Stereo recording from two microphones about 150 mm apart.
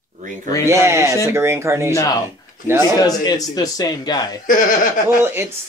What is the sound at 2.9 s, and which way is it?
Speech, 25° left (ahead or behind).